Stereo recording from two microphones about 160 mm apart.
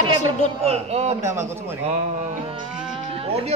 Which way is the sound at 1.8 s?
45° right (ahead or behind).